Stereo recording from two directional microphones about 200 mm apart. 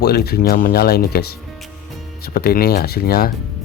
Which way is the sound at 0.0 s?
50° left (ahead or behind).